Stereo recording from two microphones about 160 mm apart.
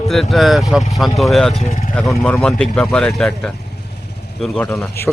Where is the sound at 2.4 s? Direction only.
5° left (ahead or behind).